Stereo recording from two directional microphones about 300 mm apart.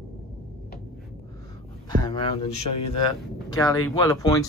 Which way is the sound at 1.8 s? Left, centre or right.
Centre.